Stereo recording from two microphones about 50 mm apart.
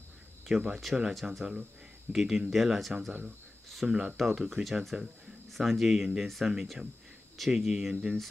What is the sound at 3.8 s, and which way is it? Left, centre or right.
Speech, centre.